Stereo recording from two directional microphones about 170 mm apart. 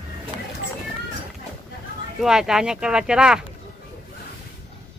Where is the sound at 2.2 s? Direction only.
5° right (ahead or behind).